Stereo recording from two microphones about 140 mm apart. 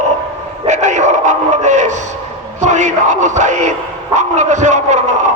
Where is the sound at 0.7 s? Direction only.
60° right (ahead or behind).